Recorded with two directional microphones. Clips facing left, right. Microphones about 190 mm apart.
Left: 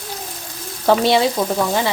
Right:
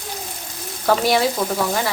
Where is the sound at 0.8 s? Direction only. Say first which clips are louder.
Left 3 dB; 25° left (ahead or behind).